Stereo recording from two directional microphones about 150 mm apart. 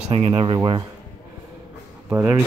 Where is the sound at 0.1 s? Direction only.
35° right (ahead or behind).